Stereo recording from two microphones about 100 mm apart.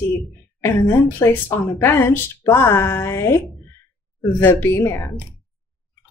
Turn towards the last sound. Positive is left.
turn(degrees=25)  # may be behind; listen again after turning